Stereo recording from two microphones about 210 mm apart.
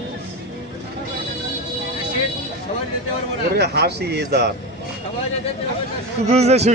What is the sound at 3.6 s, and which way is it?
Speech, 50° right (ahead or behind).